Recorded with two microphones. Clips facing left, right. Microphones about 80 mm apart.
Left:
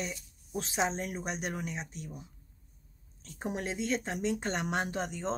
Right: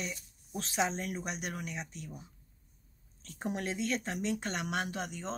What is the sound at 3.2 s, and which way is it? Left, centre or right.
Speech, left.